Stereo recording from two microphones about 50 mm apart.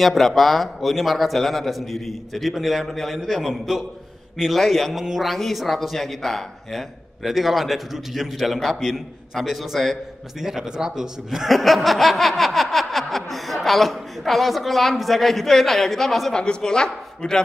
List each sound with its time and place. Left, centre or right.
0.0 s speech: centre
10.4 s speech: centre
16.3 s speech: centre